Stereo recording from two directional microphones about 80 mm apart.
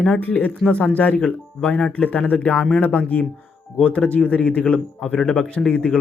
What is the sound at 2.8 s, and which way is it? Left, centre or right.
Speech, left.